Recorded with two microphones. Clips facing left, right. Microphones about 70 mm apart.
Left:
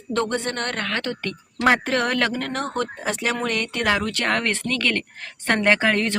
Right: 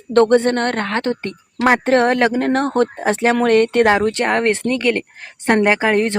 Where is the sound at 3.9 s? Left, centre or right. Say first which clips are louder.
Right 6 dB; right.